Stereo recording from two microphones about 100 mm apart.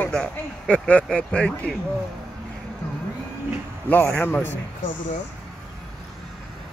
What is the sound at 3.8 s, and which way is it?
Speech, 15° left (ahead or behind).